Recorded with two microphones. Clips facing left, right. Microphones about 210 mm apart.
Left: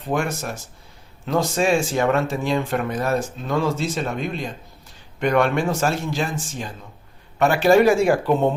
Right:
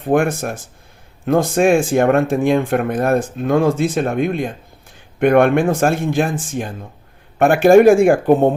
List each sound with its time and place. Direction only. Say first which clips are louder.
0.0 s speech: right 8 dB; 55° right (ahead or behind)